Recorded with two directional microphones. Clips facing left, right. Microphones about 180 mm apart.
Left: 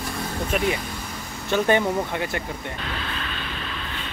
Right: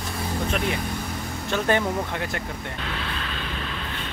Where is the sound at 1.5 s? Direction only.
Centre (ahead or behind).